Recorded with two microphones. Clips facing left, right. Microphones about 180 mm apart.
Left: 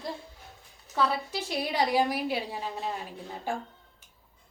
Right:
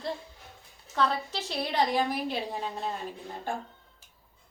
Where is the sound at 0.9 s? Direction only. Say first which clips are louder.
Even; 10° left (ahead or behind).